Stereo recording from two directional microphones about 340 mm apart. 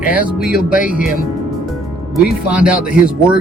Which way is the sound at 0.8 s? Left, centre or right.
Centre.